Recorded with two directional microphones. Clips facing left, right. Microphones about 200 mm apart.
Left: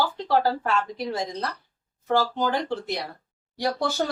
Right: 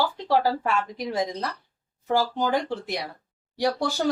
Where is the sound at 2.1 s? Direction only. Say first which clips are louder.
Even; 15° right (ahead or behind).